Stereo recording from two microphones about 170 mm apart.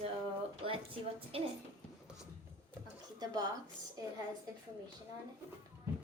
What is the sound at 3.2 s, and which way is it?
Speech, 20° right (ahead or behind).